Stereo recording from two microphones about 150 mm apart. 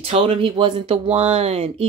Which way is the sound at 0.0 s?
40° right (ahead or behind).